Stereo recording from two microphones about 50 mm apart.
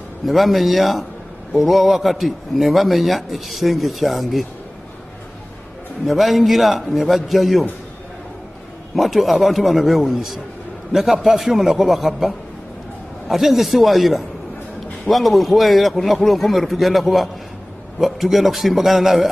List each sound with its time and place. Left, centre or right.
0.2 s a man's voice: centre
6.0 s a man's voice: centre
8.9 s a man's voice: centre